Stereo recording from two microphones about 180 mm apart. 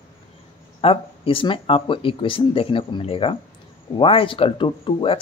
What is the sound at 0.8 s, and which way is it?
Speech, 30° left (ahead or behind).